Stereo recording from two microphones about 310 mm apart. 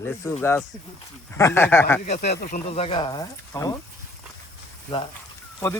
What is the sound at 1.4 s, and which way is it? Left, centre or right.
Speech, centre.